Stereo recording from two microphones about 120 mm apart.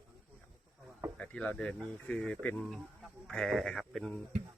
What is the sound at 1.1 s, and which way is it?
Speech, 10° left (ahead or behind).